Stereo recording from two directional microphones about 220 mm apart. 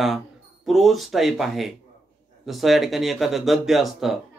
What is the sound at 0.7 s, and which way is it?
Speech, centre (ahead or behind).